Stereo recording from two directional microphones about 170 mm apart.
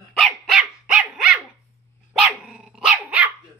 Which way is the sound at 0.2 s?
5° right (ahead or behind).